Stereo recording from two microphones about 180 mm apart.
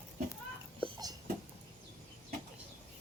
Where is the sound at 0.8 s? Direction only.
20° right (ahead or behind).